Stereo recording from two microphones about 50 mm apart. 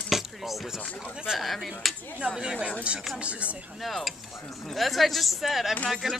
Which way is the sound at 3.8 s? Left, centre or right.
Centre.